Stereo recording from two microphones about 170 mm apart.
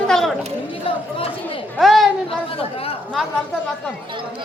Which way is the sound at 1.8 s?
Centre (ahead or behind).